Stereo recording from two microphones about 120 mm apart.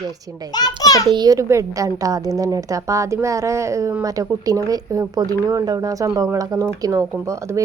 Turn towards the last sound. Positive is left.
turn(degrees=-25)  # may be behind; listen again after turning